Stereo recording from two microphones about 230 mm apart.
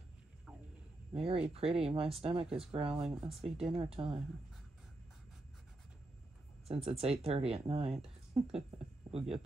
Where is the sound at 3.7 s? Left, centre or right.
Right.